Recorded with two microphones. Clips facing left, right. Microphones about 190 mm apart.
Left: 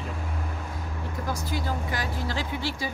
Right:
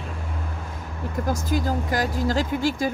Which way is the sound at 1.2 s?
45° right (ahead or behind).